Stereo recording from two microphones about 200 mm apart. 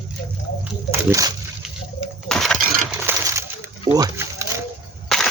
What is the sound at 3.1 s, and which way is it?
Coin, 15° right (ahead or behind).